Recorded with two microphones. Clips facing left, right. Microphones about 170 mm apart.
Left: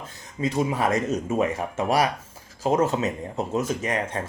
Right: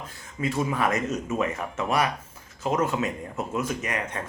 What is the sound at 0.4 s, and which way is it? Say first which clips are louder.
Speech: left 2 dB; 20° left (ahead or behind).